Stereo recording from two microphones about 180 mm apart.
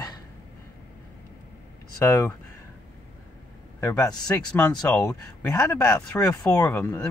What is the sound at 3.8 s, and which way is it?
Speech, 15° left (ahead or behind).